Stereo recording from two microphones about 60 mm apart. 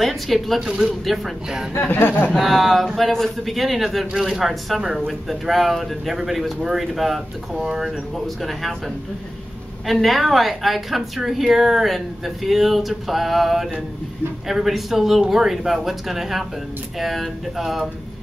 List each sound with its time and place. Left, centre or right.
0.0 s speech: centre
1.7 s speech: left
2.3 s speech: centre